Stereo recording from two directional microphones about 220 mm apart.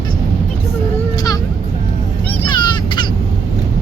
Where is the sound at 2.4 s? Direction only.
20° left (ahead or behind).